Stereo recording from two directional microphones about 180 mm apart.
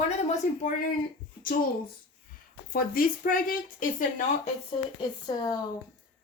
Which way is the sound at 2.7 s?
55° left (ahead or behind).